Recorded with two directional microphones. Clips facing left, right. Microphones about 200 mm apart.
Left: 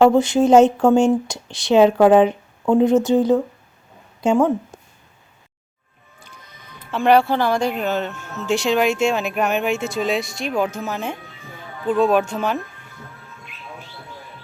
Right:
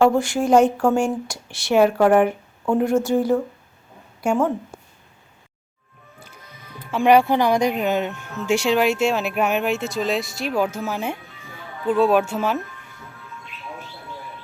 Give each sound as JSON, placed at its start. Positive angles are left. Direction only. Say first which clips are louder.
{"t": 0.0, "sound": "speech", "louder": "left 4 dB", "side_deg": 20}
{"t": 6.7, "sound": "speech", "louder": "even", "side_deg": -10}